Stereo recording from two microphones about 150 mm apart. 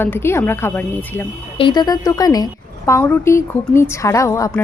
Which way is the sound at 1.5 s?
30° left (ahead or behind).